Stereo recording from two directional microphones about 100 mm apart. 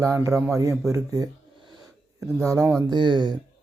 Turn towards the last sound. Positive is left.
turn(degrees=-50)  # may be behind; listen again after turning